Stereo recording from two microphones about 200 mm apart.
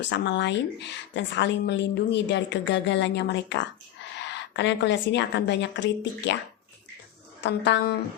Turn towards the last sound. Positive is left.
turn(degrees=60)  # may be behind; listen again after turning